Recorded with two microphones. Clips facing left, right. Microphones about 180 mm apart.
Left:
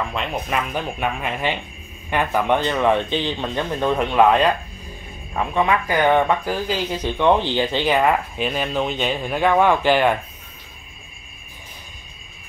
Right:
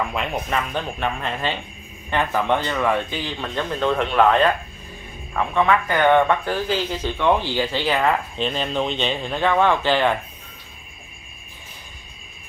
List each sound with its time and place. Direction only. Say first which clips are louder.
0.1 s speech: even; centre (ahead or behind)
0.5 s speech: left 1 dB; 10° left (ahead or behind)